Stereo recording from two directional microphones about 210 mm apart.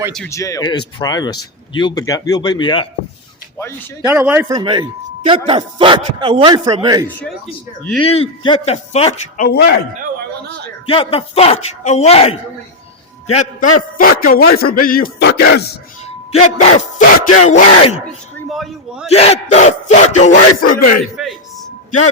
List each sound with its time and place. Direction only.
0.3 s speech: 15° left (ahead or behind)
4.0 s speech: 10° right (ahead or behind)
7.2 s speech: centre (ahead or behind)
8.0 s speech: 25° left (ahead or behind)
9.5 s a man's voice: 50° left (ahead or behind)
10.8 s a man's voice: 25° left (ahead or behind); by 15.7 s 50° left (ahead or behind)
16.0 s speech: 30° left (ahead or behind)
17.4 s a sound: 35° left (ahead or behind)
17.9 s a man's voice: centre (ahead or behind)
19.0 s a sound: 30° left (ahead or behind)
20.6 s a man's voice: 40° left (ahead or behind)